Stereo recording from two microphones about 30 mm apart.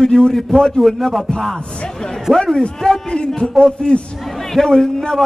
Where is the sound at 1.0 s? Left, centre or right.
Centre.